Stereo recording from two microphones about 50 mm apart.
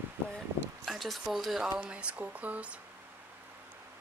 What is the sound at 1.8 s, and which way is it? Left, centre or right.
Speech, right.